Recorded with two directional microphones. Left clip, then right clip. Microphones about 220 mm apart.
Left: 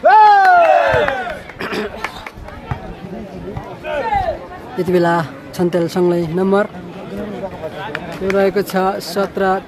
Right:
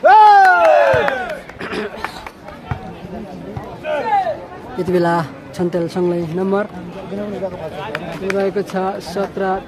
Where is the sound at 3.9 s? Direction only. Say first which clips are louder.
Right 1 dB; 15° right (ahead or behind).